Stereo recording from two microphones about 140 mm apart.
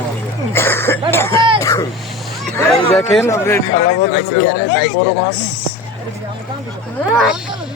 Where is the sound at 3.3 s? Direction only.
20° left (ahead or behind).